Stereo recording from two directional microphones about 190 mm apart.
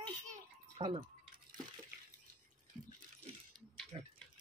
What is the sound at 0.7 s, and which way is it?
Speech, 30° right (ahead or behind).